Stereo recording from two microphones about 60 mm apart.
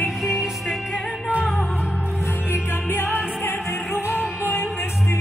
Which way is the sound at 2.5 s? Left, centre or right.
Left.